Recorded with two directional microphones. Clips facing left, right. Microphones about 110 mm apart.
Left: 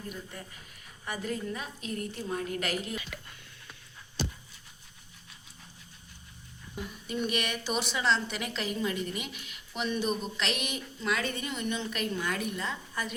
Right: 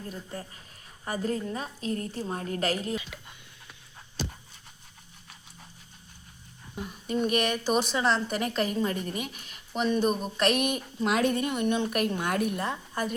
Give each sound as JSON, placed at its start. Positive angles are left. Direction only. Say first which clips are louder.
{"t": 0.1, "sound": "a woman's voice", "louder": "right 3 dB", "side_deg": -30}
{"t": 3.0, "sound": "a sound", "louder": "left 1 dB", "side_deg": -20}
{"t": 6.7, "sound": "a woman's voice", "louder": "right 5 dB", "side_deg": -45}